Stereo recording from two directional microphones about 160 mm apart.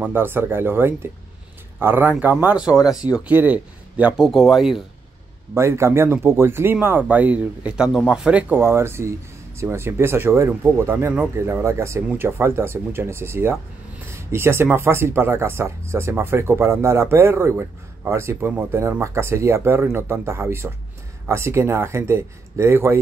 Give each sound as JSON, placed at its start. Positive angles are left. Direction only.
{"t": 0.0, "sound": "speech", "side_deg": -15}
{"t": 5.5, "sound": "speech", "side_deg": -15}